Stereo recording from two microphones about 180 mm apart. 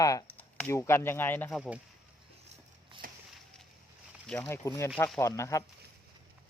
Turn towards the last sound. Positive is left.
turn(degrees=15)  # may be behind; listen again after turning